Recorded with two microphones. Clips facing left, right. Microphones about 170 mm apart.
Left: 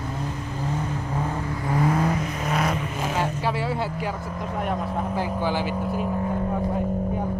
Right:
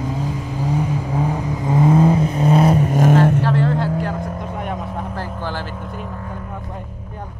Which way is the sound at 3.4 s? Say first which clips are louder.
Right 6 dB; 10° left (ahead or behind).